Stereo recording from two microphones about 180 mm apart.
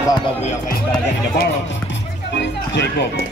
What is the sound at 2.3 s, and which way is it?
Speech, 70° left (ahead or behind).